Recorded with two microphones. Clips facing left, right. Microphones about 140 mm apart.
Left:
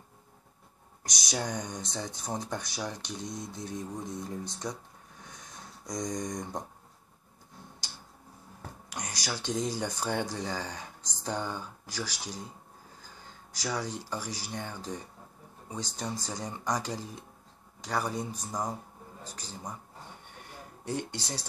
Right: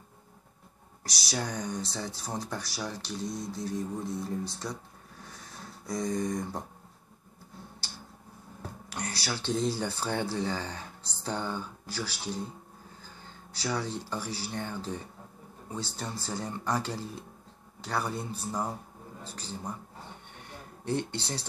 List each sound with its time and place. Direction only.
1.0 s speech: 20° left (ahead or behind)
5.2 s a sound: 20° left (ahead or behind)
8.9 s speech: 15° left (ahead or behind)
20.8 s speech: 10° left (ahead or behind)